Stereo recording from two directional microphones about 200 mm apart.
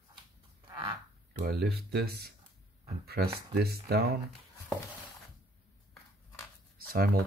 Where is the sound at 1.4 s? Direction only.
55° right (ahead or behind).